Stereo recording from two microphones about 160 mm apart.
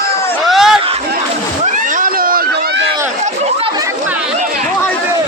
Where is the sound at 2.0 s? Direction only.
65° right (ahead or behind).